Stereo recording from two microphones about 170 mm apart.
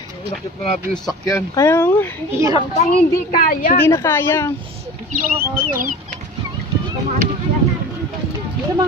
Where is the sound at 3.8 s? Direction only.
15° left (ahead or behind).